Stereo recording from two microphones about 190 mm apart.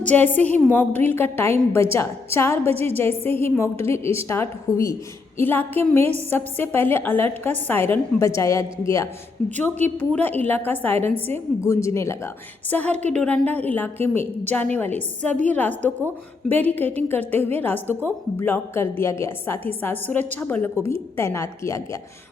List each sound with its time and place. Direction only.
0.0 s a woman's voice: 10° left (ahead or behind)
9.4 s a woman's voice: 5° left (ahead or behind)